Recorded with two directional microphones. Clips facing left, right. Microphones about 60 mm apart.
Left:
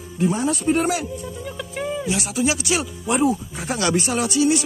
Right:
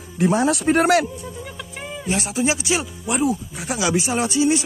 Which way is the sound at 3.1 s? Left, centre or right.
Centre.